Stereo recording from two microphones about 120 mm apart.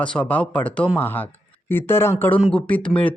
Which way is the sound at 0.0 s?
10° left (ahead or behind).